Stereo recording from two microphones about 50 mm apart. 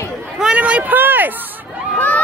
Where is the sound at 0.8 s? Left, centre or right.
Right.